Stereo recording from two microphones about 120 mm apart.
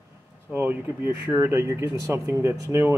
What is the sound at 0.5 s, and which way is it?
Speech, 15° right (ahead or behind).